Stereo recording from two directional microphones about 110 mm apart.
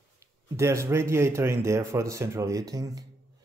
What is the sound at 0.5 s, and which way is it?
Speech, 25° right (ahead or behind).